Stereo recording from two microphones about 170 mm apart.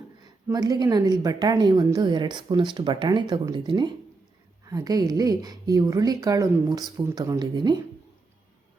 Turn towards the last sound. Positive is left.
turn(degrees=-25)  # may be behind; listen again after turning